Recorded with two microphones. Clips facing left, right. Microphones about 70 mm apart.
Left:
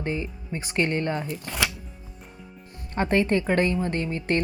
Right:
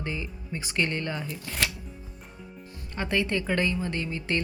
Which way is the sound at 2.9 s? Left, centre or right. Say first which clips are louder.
Left 5 dB; left.